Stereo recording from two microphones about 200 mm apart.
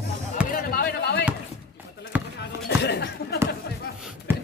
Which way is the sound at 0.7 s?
50° left (ahead or behind).